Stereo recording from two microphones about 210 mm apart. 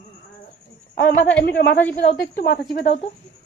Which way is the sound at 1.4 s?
55° left (ahead or behind).